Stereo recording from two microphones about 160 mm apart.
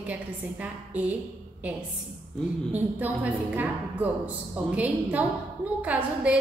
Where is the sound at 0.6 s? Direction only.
10° right (ahead or behind).